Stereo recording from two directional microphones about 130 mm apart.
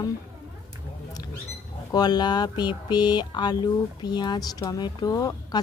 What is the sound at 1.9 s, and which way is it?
Speech, 30° left (ahead or behind).